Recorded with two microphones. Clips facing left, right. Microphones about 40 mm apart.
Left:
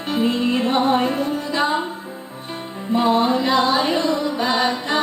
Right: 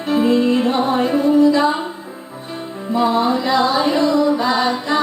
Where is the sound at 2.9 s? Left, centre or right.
Left.